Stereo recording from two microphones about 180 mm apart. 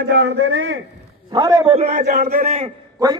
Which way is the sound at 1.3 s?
20° right (ahead or behind).